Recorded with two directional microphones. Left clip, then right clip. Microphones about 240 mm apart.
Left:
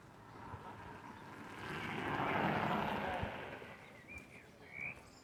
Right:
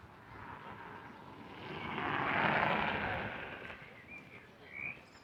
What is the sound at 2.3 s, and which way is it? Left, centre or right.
Vehicle, right.